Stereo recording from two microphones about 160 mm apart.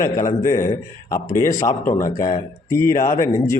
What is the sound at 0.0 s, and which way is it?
A man's voice, 20° left (ahead or behind).